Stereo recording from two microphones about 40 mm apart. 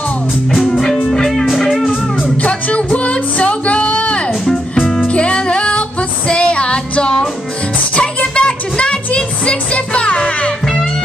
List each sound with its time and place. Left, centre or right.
1.1 s music: centre
1.4 s music: centre
2.2 s music: left
4.5 s music: centre
5.0 s music: left